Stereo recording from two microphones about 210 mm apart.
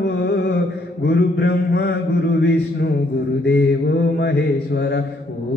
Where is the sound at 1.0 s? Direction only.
50° left (ahead or behind).